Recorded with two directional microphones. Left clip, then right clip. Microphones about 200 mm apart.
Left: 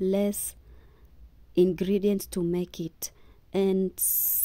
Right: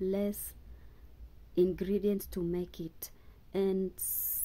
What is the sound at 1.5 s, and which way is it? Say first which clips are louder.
Speech: left 6 dB; 35° left (ahead or behind).